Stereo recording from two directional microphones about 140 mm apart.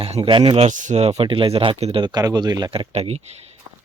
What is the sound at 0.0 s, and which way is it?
Speech, 40° right (ahead or behind).